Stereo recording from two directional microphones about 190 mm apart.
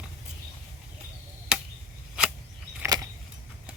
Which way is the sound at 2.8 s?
20° right (ahead or behind).